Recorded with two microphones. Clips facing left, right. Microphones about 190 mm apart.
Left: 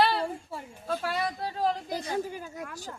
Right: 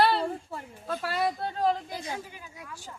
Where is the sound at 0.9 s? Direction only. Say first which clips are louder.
Right 1 dB; centre (ahead or behind).